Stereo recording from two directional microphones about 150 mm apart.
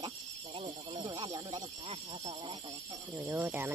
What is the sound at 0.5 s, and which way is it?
Speech, 35° right (ahead or behind).